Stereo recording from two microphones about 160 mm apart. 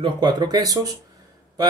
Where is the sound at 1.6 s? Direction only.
25° right (ahead or behind).